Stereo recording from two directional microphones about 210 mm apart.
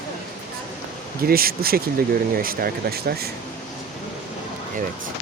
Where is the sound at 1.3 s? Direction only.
45° right (ahead or behind).